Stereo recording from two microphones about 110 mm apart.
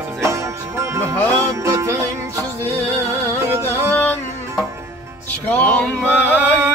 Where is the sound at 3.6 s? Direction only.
20° left (ahead or behind).